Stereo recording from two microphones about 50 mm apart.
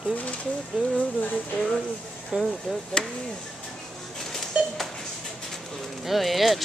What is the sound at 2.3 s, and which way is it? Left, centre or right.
Speech, centre.